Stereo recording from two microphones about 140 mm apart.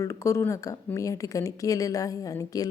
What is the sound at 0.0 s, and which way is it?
Speech, 20° left (ahead or behind).